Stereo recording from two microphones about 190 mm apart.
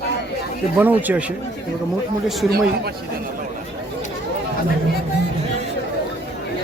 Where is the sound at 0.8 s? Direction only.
10° right (ahead or behind).